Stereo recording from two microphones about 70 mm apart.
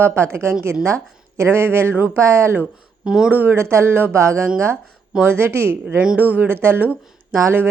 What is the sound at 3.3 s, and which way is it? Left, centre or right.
Speech, right.